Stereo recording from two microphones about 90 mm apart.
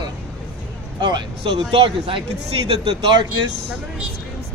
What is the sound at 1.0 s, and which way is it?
Speech, 60° right (ahead or behind).